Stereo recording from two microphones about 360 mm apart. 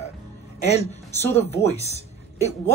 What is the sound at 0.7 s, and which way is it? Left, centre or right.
A woman's voice, centre.